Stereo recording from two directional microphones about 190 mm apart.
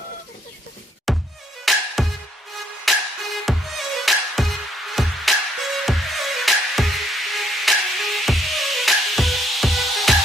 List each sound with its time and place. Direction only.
1.1 s music: centre (ahead or behind)